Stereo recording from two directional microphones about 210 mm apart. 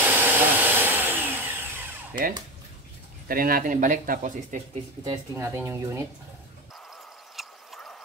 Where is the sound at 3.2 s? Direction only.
45° right (ahead or behind).